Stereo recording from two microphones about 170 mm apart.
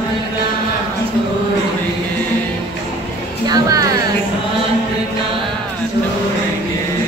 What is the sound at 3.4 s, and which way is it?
Music, 20° right (ahead or behind).